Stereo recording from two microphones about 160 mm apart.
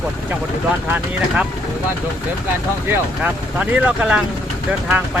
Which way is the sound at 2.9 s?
10° right (ahead or behind).